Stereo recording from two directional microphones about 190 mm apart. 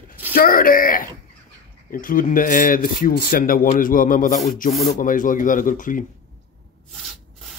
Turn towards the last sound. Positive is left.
turn(degrees=45)  # may be behind; listen again after turning